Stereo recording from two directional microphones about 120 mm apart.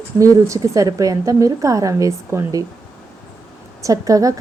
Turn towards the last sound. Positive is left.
turn(degrees=-30)  # may be behind; listen again after turning